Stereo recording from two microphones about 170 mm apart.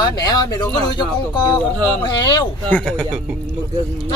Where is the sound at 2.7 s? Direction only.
5° left (ahead or behind).